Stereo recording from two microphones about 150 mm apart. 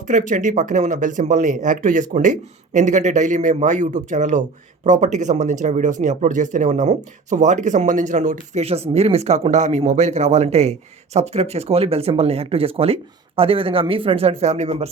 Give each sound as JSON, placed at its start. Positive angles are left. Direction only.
{"t": 0.1, "sound": "speech", "side_deg": -60}